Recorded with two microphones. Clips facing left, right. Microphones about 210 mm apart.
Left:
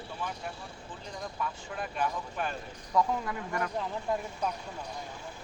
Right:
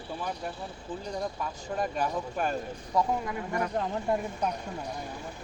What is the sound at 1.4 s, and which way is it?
Speech, 40° right (ahead or behind).